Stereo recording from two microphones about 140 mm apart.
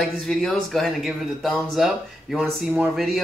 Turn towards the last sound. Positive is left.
turn(degrees=0)  # may be behind; listen again after turning